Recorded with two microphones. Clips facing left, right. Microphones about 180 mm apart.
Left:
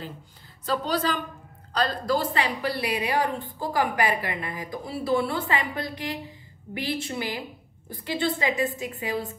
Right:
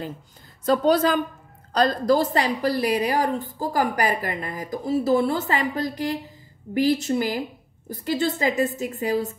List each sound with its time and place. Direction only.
0.7 s a woman's voice: 45° right (ahead or behind)